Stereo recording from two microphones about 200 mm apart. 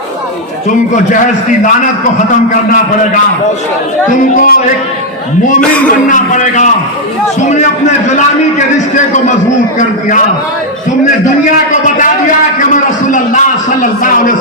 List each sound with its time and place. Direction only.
4.4 s speech: 45° left (ahead or behind)
5.5 s a man's voice: 5° left (ahead or behind)
6.1 s a man's voice: 40° left (ahead or behind)
9.7 s a man's voice: 40° left (ahead or behind)
12.7 s a man's voice: 40° left (ahead or behind)